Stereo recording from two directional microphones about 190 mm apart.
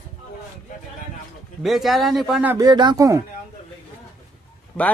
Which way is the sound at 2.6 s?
20° right (ahead or behind).